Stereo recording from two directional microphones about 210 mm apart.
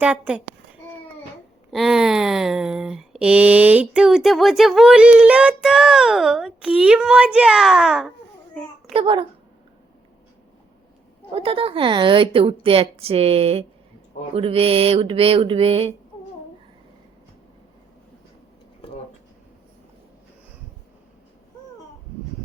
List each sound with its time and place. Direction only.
0.0 s speech: 5° right (ahead or behind)
1.7 s speech: centre (ahead or behind)
8.9 s a woman's voice: 25° right (ahead or behind)
11.3 s a woman's voice: 25° right (ahead or behind)